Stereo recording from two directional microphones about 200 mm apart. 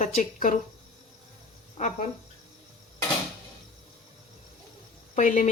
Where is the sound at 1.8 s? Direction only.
35° left (ahead or behind).